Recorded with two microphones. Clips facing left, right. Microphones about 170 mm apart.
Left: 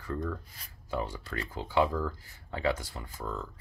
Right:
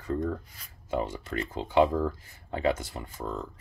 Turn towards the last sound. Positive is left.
turn(degrees=-20)  # may be behind; listen again after turning